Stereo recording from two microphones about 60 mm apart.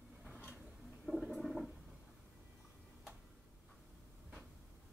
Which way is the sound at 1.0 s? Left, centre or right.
Centre.